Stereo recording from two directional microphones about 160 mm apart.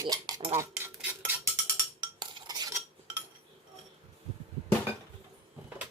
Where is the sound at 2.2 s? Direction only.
25° right (ahead or behind).